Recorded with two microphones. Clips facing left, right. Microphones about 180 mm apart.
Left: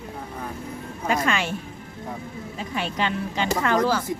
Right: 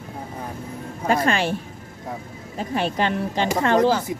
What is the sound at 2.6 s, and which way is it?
Speech, 40° right (ahead or behind).